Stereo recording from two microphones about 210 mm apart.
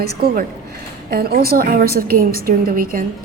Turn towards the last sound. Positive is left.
turn(degrees=-40)  # may be behind; listen again after turning